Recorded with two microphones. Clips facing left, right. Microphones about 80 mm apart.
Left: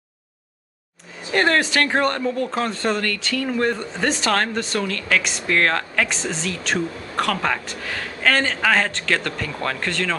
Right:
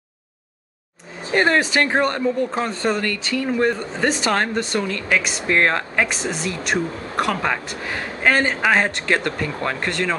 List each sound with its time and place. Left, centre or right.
1.3 s speech: centre
6.0 s speech: centre